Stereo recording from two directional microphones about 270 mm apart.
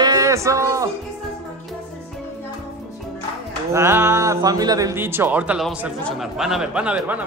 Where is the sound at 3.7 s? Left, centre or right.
Centre.